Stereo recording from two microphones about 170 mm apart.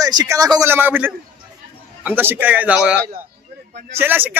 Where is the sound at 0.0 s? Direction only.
20° right (ahead or behind).